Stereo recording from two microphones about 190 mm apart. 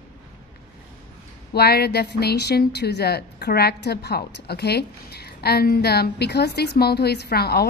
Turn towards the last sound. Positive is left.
turn(degrees=55)  # may be behind; listen again after turning